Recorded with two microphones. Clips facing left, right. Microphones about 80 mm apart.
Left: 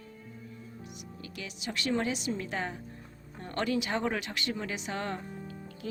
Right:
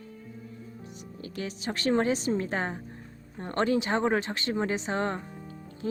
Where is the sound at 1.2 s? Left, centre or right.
Right.